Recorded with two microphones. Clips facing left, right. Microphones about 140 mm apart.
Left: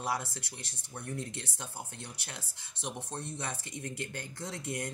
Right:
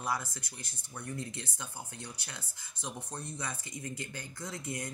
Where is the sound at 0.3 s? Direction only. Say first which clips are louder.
Left 2 dB; 70° left (ahead or behind).